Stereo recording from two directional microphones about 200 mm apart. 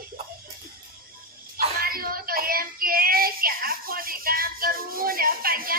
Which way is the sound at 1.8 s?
45° right (ahead or behind).